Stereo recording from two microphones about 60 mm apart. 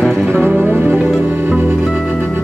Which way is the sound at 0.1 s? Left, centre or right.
Right.